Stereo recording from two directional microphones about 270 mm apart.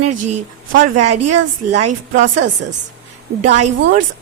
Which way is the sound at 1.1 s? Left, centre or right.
Right.